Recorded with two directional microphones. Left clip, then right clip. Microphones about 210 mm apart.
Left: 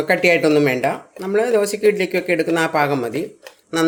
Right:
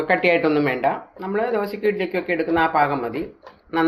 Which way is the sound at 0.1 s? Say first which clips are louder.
Left 3 dB; 65° left (ahead or behind).